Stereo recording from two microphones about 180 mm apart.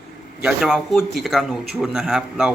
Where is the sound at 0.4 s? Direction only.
5° right (ahead or behind).